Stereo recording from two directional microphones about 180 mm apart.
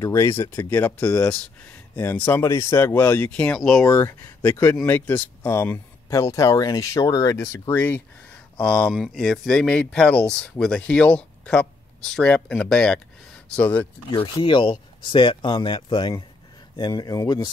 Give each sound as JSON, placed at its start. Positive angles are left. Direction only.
{"t": 0.0, "sound": "speech", "side_deg": 15}
{"t": 3.8, "sound": "speech", "side_deg": 20}
{"t": 14.1, "sound": "speech", "side_deg": 25}